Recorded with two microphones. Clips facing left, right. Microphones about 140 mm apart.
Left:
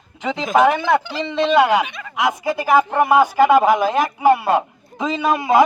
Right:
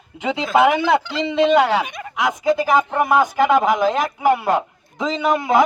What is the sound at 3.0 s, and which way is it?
A man's voice, 15° left (ahead or behind).